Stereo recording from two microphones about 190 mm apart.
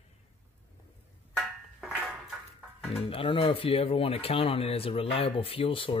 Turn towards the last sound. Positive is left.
turn(degrees=30)  # may be behind; listen again after turning